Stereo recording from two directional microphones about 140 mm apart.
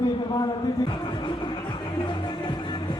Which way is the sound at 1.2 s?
35° left (ahead or behind).